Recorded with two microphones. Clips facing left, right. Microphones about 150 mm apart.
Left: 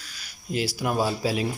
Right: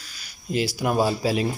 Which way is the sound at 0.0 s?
Centre (ahead or behind).